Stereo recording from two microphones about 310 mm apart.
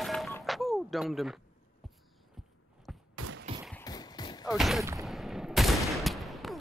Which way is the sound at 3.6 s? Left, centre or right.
Centre.